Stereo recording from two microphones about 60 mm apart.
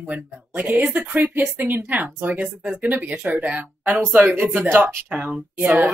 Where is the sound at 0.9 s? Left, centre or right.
Right.